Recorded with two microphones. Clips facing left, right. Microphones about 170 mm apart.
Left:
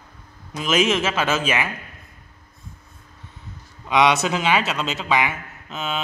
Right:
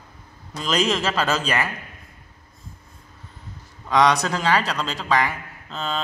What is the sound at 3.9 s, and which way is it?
Mantra, 20° left (ahead or behind).